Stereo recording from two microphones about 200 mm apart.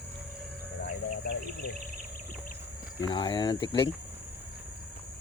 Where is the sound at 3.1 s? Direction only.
25° left (ahead or behind).